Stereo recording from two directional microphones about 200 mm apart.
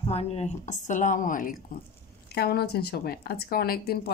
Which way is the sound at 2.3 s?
55° left (ahead or behind).